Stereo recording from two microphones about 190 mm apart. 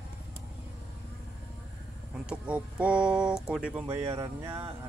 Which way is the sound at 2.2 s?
5° right (ahead or behind).